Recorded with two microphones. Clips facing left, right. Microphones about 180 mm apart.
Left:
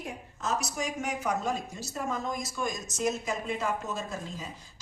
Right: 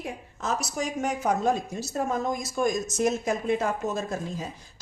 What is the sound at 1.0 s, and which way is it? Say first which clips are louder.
A woman's voice: right 7 dB; 45° right (ahead or behind).